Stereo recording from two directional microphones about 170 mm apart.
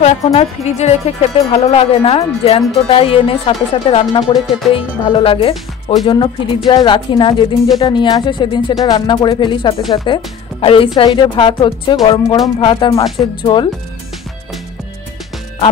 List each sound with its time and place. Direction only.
0.0 s speech: 40° left (ahead or behind)
4.5 s music: centre (ahead or behind)
4.7 s speech: 30° left (ahead or behind)